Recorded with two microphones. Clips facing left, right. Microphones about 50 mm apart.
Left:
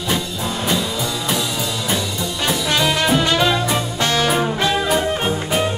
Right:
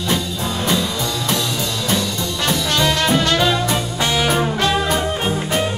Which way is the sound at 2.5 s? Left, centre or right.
Centre.